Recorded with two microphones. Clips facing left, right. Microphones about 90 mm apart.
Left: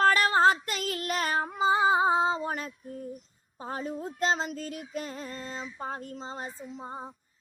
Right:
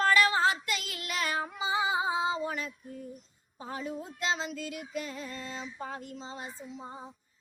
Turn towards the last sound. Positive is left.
turn(degrees=45)  # may be behind; listen again after turning